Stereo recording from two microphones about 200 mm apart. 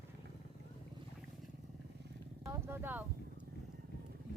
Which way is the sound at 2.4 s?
15° right (ahead or behind).